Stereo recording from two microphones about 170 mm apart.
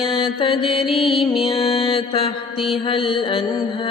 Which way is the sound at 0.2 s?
30° left (ahead or behind).